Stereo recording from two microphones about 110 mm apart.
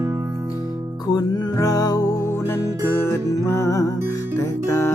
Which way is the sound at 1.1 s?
35° left (ahead or behind).